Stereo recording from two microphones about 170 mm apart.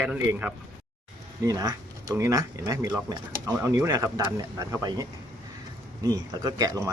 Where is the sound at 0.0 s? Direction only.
10° right (ahead or behind).